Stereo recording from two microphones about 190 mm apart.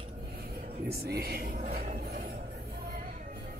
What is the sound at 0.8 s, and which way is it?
Speech, 55° right (ahead or behind).